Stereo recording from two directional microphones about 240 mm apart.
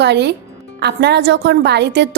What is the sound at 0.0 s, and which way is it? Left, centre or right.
A woman's voice, right.